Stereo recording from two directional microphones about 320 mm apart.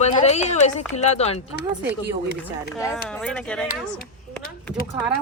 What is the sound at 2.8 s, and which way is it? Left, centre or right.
Speech, centre.